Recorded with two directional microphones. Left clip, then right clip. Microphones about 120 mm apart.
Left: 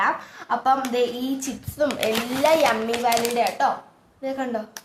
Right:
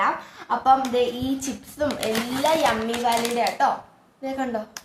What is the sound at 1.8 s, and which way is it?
Speech, 25° left (ahead or behind).